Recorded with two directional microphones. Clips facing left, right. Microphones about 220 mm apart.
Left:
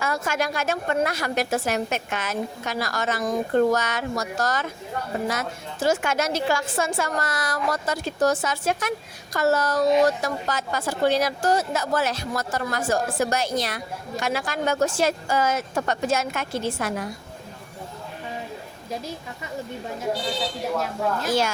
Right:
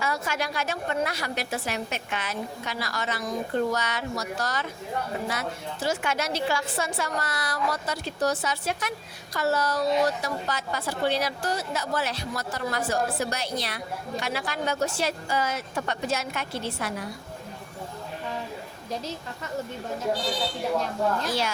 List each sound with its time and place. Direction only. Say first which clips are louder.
0.0 s a woman's voice: left 4 dB; 45° left (ahead or behind)
18.9 s a woman's voice: left 1 dB; 10° left (ahead or behind)
20.7 s a woman's voice: even; 5° left (ahead or behind)
21.2 s a woman's voice: left 5 dB; 45° left (ahead or behind)